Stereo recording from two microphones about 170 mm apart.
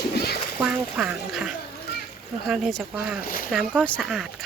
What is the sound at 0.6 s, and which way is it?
Duck, centre (ahead or behind).